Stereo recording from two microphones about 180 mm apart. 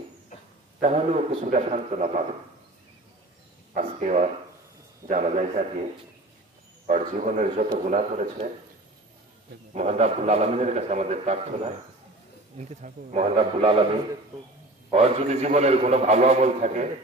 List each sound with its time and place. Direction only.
0.7 s a man's voice: 40° right (ahead or behind)
3.7 s a man's voice: 40° right (ahead or behind)
6.9 s a man's voice: 40° right (ahead or behind)
9.8 s a man's voice: 40° right (ahead or behind)
14.9 s a man's voice: 35° right (ahead or behind)